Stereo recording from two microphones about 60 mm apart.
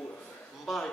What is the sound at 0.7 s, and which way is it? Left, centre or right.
Speech, centre.